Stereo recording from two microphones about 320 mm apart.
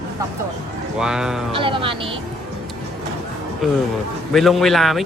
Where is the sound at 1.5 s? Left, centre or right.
Centre.